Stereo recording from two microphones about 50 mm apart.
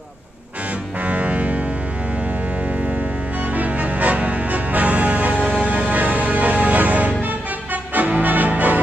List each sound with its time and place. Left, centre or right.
1.0 s music: right
3.5 s music: right